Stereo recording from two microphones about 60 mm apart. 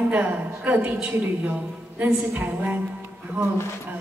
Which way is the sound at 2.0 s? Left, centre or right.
Right.